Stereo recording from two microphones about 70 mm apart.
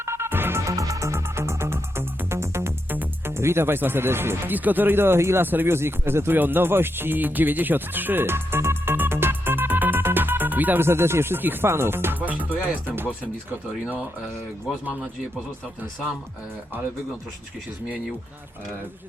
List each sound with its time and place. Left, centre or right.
0.0 s music: right
0.6 s music: right
2.9 s music: right
3.3 s speech: right